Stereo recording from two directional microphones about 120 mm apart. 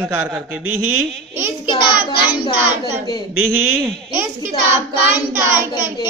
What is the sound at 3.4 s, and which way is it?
Speech, 20° right (ahead or behind).